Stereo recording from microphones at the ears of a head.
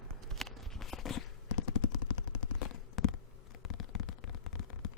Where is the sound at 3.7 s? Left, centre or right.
Left.